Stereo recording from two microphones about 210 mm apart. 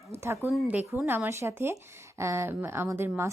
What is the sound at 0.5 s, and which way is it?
A woman's voice, 5° right (ahead or behind).